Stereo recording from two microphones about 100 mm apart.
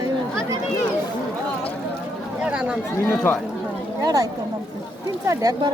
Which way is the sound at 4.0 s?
35° right (ahead or behind).